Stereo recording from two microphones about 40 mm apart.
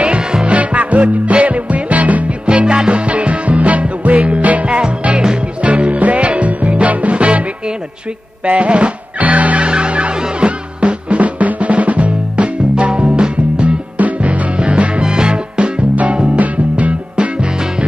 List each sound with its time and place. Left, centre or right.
0.0 s music: right
0.5 s music: right
3.1 s music: right
8.5 s drum: right
9.2 s music: right
9.7 s music: right
13.9 s music: right
14.6 s music: right
16.3 s music: right